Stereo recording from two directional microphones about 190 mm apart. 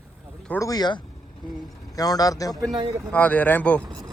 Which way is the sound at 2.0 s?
20° left (ahead or behind).